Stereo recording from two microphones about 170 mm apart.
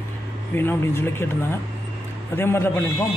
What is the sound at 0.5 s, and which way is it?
Speech, 15° left (ahead or behind).